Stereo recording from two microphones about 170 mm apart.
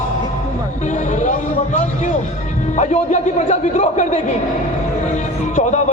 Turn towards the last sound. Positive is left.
turn(degrees=45)  # may be behind; listen again after turning